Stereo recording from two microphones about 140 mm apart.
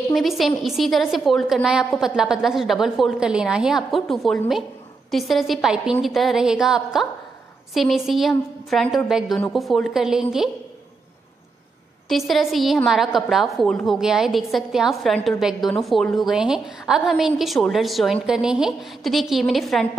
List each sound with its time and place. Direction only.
0.1 s a woman's voice: centre (ahead or behind)
12.1 s a woman's voice: centre (ahead or behind)